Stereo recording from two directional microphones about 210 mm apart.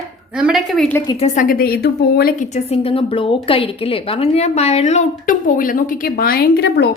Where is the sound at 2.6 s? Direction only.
25° left (ahead or behind).